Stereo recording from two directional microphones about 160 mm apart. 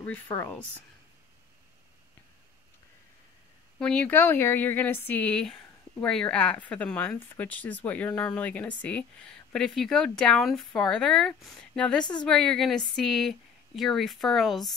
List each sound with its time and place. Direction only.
0.0 s speech: 10° left (ahead or behind)
3.8 s speech: 5° left (ahead or behind)